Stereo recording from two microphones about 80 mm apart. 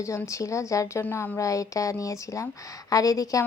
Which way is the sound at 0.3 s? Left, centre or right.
Left.